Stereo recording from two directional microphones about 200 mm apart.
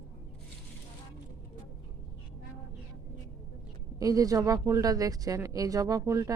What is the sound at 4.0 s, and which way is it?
Speech, 15° right (ahead or behind).